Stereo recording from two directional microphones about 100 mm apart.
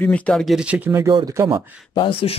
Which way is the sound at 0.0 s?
10° left (ahead or behind).